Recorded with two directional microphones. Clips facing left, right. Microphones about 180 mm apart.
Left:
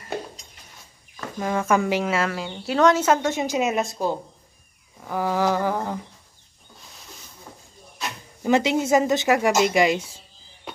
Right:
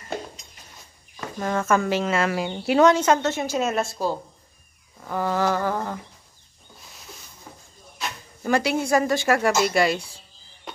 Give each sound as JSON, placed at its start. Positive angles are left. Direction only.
{"t": 1.4, "sound": "a woman's voice", "side_deg": 10}
{"t": 2.2, "sound": "speech", "side_deg": -10}
{"t": 2.8, "sound": "a woman's voice", "side_deg": 5}
{"t": 8.4, "sound": "speech", "side_deg": 20}